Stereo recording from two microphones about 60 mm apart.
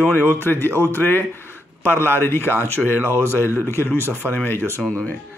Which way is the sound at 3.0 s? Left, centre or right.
Right.